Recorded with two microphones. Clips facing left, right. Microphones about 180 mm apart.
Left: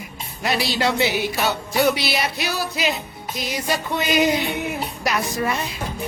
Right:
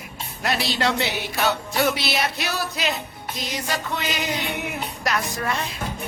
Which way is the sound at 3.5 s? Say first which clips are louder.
Left 4 dB; 10° left (ahead or behind).